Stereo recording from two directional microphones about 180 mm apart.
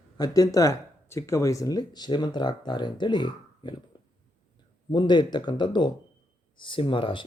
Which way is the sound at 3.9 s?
25° left (ahead or behind).